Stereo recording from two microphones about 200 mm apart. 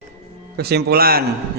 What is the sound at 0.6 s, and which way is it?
Speech, 55° right (ahead or behind).